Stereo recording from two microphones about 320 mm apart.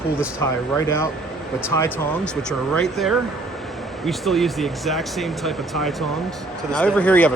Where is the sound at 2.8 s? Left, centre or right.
Centre.